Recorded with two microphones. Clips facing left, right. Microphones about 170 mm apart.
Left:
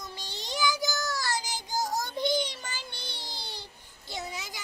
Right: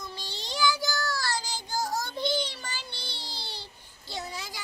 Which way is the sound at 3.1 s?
15° left (ahead or behind).